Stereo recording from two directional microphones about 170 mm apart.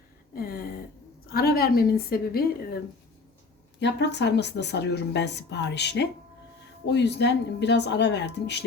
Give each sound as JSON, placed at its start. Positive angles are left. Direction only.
{"t": 0.3, "sound": "a sound", "side_deg": 60}
{"t": 1.3, "sound": "a woman's voice", "side_deg": 65}
{"t": 3.8, "sound": "a woman's voice", "side_deg": 90}